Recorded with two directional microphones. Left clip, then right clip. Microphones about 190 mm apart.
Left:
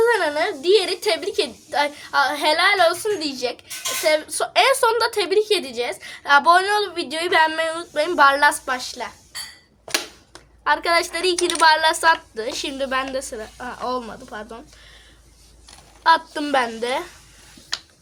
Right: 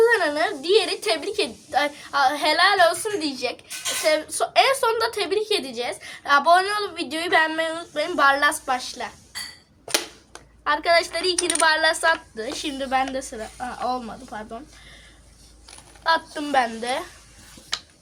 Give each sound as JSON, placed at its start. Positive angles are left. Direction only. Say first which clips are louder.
{"t": 0.0, "sound": "a woman's voice", "louder": "even", "side_deg": 40}
{"t": 10.6, "sound": "a woman's voice", "louder": "left 1 dB", "side_deg": 45}
{"t": 16.0, "sound": "a woman's voice", "louder": "left 5 dB", "side_deg": 50}